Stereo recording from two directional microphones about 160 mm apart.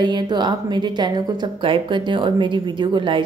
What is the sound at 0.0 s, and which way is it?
A woman's voice, 30° right (ahead or behind).